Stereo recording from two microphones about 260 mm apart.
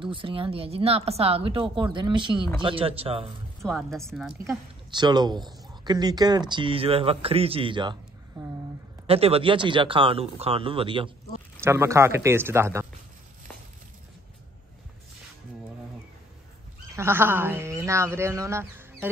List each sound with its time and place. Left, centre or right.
0.0 s speech: centre
3.6 s speech: centre
4.5 s a woman's voice: centre
16.9 s speech: centre